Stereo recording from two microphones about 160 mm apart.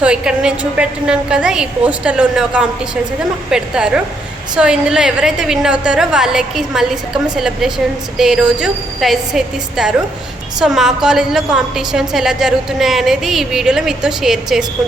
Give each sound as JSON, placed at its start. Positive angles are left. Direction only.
{"t": 0.0, "sound": "a woman's voice", "side_deg": -5}